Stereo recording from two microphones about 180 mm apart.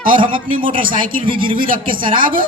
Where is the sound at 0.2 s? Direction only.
30° right (ahead or behind).